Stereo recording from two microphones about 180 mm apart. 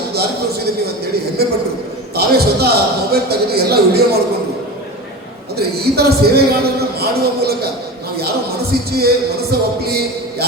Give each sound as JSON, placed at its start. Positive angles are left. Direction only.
{"t": 0.1, "sound": "a sound", "side_deg": -60}
{"t": 1.4, "sound": "a man's voice", "side_deg": -60}
{"t": 5.5, "sound": "a man's voice", "side_deg": -60}
{"t": 8.9, "sound": "a man's voice", "side_deg": -60}